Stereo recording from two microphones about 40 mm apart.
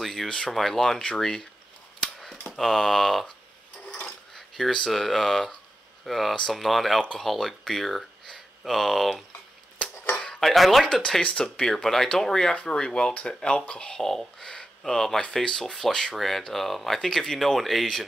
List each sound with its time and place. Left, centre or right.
0.0 s speech: centre
2.5 s speech: centre
4.4 s a sound: centre
4.8 s speech: centre
10.1 s a sound: centre
10.4 s speech: centre
11.2 s speech: centre
14.0 s speech: centre